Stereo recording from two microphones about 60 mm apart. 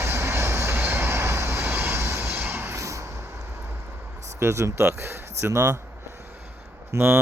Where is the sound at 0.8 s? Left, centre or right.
Right.